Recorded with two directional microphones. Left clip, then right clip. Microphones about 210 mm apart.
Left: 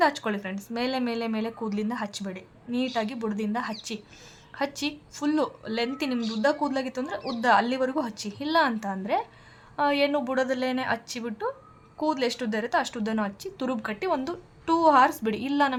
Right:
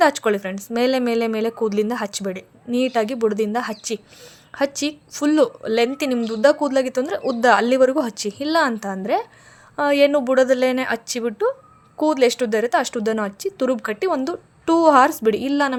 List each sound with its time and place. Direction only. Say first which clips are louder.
0.0 s a woman's voice: right 8 dB; 30° right (ahead or behind)